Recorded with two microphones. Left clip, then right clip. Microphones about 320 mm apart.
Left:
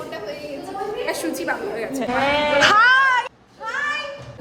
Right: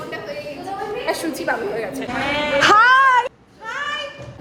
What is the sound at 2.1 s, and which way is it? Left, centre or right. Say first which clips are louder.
Speech: left 3 dB; left.